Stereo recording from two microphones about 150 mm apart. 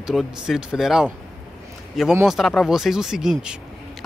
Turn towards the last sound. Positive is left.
turn(degrees=-5)  # may be behind; listen again after turning